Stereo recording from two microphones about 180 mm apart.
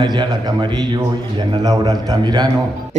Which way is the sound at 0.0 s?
25° right (ahead or behind).